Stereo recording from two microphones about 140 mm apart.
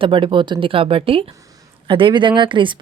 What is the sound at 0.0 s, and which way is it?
Speech, 40° right (ahead or behind).